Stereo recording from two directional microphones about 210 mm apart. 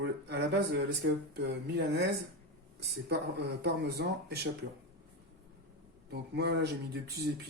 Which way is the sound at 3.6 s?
50° right (ahead or behind).